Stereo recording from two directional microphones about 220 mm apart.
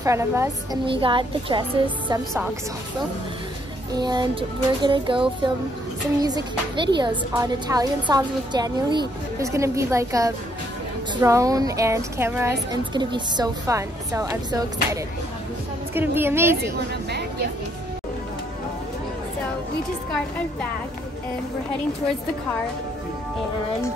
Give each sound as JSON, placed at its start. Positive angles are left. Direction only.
{"t": 0.0, "sound": "a woman's voice", "side_deg": -15}
{"t": 0.8, "sound": "music", "side_deg": -25}
{"t": 3.9, "sound": "music", "side_deg": -20}
{"t": 6.2, "sound": "a woman's voice", "side_deg": -20}
{"t": 16.6, "sound": "a woman's voice", "side_deg": -50}